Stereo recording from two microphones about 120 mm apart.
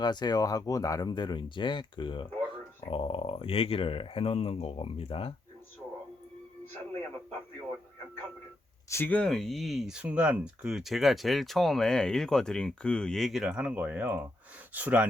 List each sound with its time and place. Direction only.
0.0 s speech: 35° left (ahead or behind)
8.9 s speech: 15° left (ahead or behind); by 15.0 s 15° right (ahead or behind)